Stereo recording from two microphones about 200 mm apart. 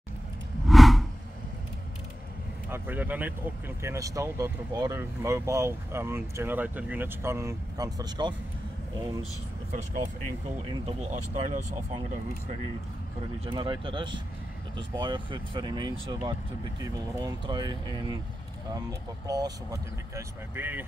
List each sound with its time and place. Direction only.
0.7 s a sound: centre (ahead or behind)
2.7 s speech: 10° right (ahead or behind)
9.7 s speech: 35° right (ahead or behind)
13.5 s speech: 25° right (ahead or behind); by 20.8 s 10° right (ahead or behind)